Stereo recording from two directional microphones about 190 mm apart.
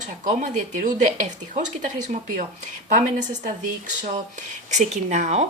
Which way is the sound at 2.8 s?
40° right (ahead or behind).